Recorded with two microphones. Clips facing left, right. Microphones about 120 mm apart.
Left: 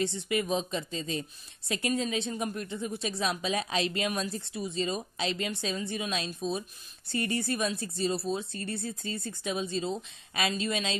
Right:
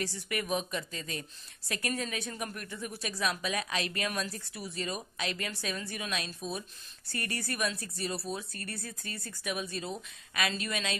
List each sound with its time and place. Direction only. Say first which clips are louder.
0.0 s a woman's voice: left 6 dB; 25° left (ahead or behind)